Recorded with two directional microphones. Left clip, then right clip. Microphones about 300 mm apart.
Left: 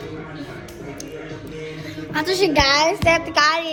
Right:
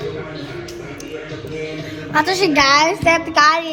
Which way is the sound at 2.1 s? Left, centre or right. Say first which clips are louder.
Right 3 dB; centre.